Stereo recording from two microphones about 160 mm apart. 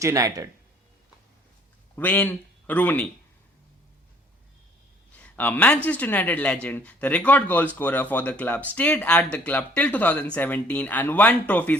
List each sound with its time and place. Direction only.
0.0 s speech: 20° right (ahead or behind)
2.0 s speech: 10° left (ahead or behind)
5.1 s speech: 10° left (ahead or behind)